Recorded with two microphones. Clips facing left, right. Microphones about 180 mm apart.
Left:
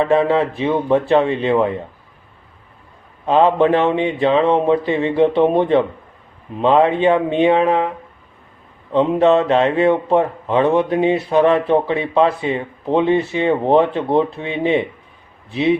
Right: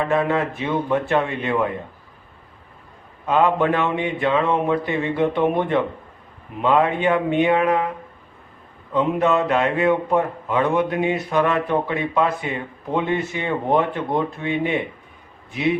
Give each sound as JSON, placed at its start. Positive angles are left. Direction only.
{"t": 0.0, "sound": "a man's voice", "side_deg": 25}
{"t": 3.2, "sound": "a man's voice", "side_deg": 25}
{"t": 8.9, "sound": "a man's voice", "side_deg": 30}